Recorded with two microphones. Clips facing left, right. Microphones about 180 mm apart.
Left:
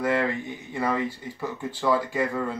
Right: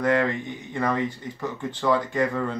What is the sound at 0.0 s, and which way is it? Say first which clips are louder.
Speech: right 2 dB; 5° left (ahead or behind).